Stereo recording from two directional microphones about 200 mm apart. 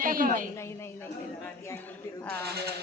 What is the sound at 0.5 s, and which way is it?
A man's voice, 15° left (ahead or behind).